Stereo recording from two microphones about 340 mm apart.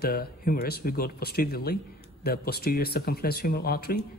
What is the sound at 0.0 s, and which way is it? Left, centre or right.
Speech, left.